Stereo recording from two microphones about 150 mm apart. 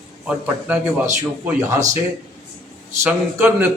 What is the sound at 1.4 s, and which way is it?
Speech, 10° right (ahead or behind).